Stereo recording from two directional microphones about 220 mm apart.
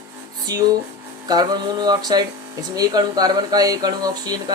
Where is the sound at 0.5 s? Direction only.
15° right (ahead or behind).